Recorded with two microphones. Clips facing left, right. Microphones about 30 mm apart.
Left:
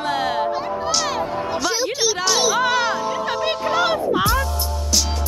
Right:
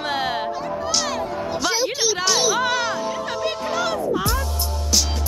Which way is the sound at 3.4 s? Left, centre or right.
Left.